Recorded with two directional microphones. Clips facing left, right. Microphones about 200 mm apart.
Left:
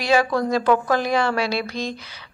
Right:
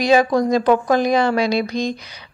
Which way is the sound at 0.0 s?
20° right (ahead or behind).